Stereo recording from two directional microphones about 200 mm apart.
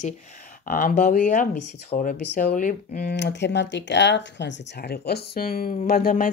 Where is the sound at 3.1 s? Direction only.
55° left (ahead or behind).